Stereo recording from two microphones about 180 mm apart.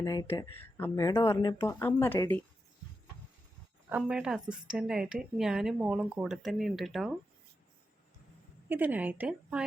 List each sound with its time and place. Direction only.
0.0 s speech: 20° left (ahead or behind)
3.8 s speech: 5° right (ahead or behind)
8.7 s speech: 10° right (ahead or behind)